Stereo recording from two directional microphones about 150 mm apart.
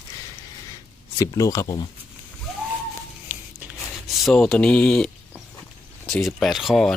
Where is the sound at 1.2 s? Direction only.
20° left (ahead or behind).